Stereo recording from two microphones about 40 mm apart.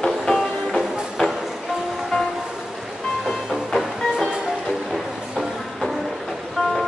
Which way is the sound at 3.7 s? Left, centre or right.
Centre.